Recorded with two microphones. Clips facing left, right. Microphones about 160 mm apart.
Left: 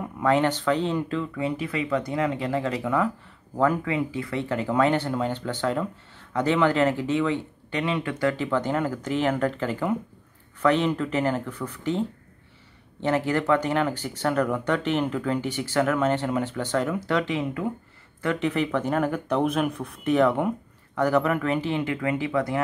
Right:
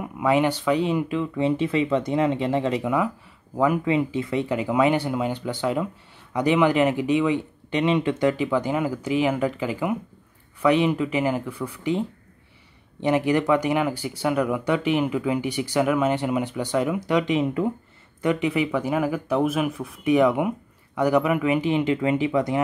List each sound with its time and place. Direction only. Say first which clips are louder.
0.0 s speech: right 1 dB; 10° right (ahead or behind)
1.3 s speech: right 6 dB; 25° right (ahead or behind)